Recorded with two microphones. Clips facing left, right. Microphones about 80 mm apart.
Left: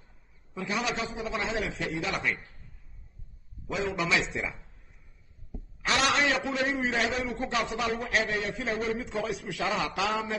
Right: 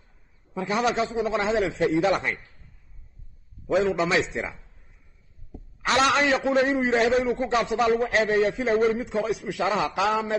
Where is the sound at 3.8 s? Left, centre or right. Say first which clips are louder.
Right 1 dB; right.